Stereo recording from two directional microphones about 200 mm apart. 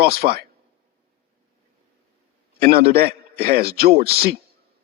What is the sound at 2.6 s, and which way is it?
A man's voice, 50° right (ahead or behind).